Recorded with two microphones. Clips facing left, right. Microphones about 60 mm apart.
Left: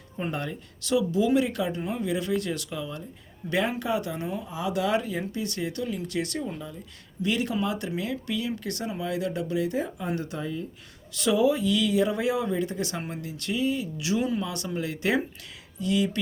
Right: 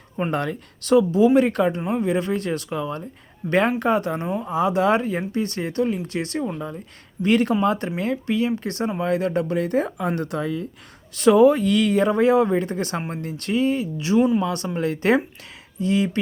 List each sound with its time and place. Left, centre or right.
0.2 s speech: right
0.9 s speech: right
1.8 s speech: right
11.1 s speech: right